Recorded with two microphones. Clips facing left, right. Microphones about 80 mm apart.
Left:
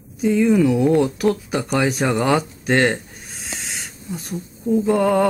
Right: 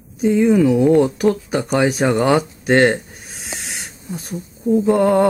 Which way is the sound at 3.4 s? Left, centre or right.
Centre.